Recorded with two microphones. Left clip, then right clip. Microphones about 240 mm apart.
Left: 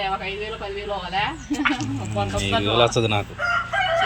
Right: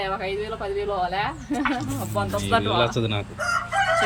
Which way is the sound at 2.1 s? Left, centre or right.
Centre.